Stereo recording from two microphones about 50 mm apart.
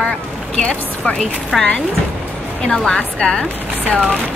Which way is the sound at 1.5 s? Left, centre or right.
Centre.